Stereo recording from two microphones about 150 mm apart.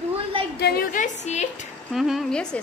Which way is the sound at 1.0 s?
50° left (ahead or behind).